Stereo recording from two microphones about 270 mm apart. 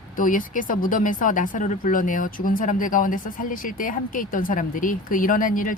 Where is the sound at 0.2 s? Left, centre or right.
Left.